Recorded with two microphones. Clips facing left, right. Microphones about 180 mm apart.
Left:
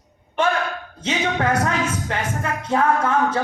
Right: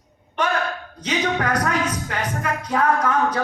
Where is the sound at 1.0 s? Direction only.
25° left (ahead or behind).